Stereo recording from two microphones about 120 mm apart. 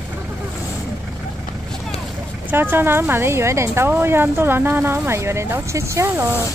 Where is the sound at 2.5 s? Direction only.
20° right (ahead or behind).